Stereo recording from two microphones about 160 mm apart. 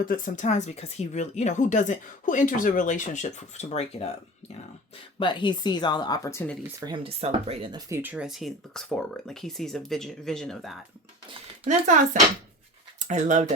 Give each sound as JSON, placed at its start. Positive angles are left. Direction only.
{"t": 0.0, "sound": "speech", "side_deg": 50}
{"t": 5.2, "sound": "speech", "side_deg": 30}
{"t": 6.7, "sound": "speech", "side_deg": -30}
{"t": 8.1, "sound": "speech", "side_deg": -5}
{"t": 11.6, "sound": "speech", "side_deg": -50}